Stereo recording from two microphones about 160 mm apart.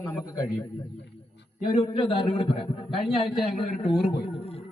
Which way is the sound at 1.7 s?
30° left (ahead or behind).